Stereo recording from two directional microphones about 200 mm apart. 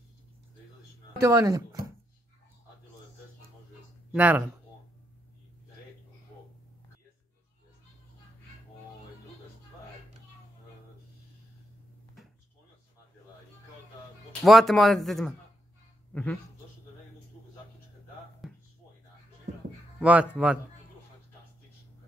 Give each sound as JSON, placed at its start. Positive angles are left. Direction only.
{"t": 1.2, "sound": "speech", "side_deg": -15}
{"t": 4.1, "sound": "speech", "side_deg": -5}
{"t": 14.4, "sound": "speech", "side_deg": 0}
{"t": 18.4, "sound": "a sound", "side_deg": 0}
{"t": 20.0, "sound": "speech", "side_deg": -5}